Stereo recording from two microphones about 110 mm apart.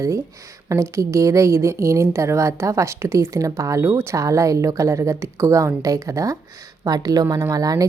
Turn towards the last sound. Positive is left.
turn(degrees=-35)  # may be behind; listen again after turning